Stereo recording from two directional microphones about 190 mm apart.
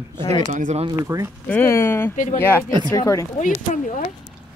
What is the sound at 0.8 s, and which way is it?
Speech, 15° right (ahead or behind).